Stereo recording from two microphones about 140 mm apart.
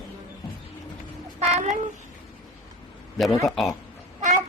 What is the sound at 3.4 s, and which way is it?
Speech, centre (ahead or behind).